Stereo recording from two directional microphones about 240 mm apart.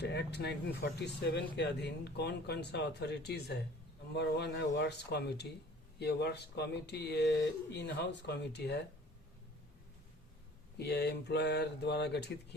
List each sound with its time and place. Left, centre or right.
0.0 s speech: left
10.8 s speech: left